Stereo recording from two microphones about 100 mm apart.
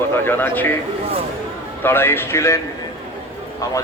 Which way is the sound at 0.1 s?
20° left (ahead or behind).